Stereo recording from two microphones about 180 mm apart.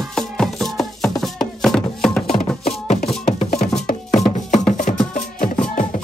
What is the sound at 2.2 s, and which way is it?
Music, 35° left (ahead or behind).